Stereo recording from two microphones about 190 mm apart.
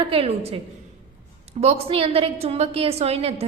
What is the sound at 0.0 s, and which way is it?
Speech, 30° right (ahead or behind).